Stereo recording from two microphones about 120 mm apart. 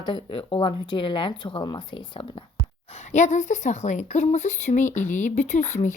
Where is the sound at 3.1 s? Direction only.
80° left.